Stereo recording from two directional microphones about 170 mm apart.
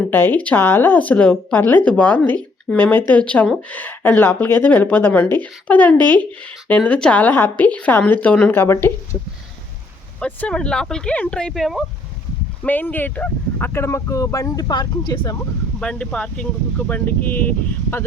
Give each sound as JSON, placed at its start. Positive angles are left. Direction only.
{"t": 0.1, "sound": "speech", "side_deg": 10}
{"t": 10.2, "sound": "speech", "side_deg": 5}
{"t": 15.8, "sound": "speech", "side_deg": 5}